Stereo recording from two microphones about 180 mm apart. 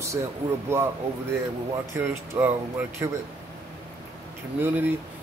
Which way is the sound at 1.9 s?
15° right (ahead or behind).